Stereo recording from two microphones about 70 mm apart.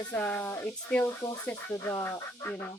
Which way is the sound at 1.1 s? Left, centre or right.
Left.